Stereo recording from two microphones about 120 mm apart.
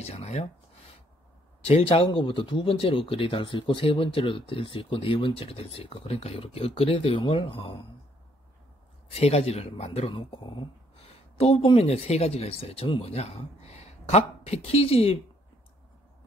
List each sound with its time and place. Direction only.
0.0 s a sound: 65° left (ahead or behind)
1.6 s speech: 55° left (ahead or behind)
9.1 s speech: 60° left (ahead or behind)